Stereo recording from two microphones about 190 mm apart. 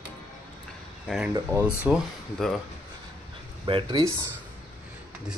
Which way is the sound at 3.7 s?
25° right (ahead or behind).